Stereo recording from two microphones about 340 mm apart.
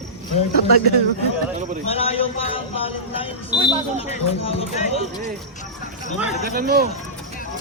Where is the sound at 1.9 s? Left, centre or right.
Centre.